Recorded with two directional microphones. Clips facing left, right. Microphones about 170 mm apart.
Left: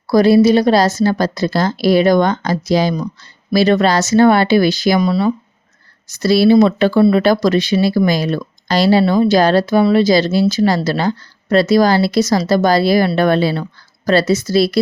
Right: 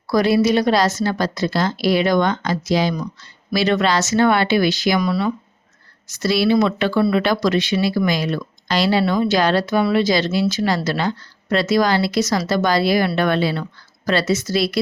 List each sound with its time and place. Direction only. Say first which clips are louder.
0.1 s speech: left 6 dB; 35° left (ahead or behind)
4.9 s speech: left 5 dB; 25° left (ahead or behind)
6.2 s speech: left 6 dB; 35° left (ahead or behind)